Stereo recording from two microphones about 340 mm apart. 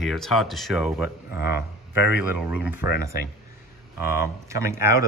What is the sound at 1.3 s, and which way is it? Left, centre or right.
Speech, left.